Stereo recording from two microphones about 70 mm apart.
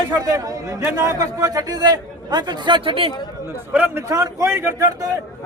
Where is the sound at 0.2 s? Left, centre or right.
Right.